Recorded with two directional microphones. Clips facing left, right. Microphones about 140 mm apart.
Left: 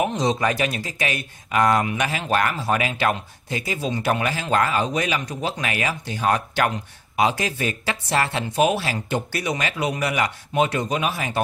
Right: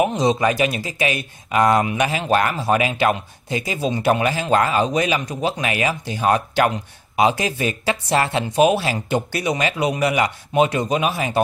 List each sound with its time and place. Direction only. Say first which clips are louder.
0.0 s speech: right 4 dB; 10° right (ahead or behind)